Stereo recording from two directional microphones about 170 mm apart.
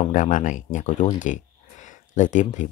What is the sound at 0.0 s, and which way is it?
Speech, 50° left (ahead or behind).